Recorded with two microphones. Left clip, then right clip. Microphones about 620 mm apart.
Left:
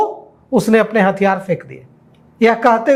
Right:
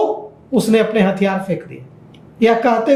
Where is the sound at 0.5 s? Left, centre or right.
Left.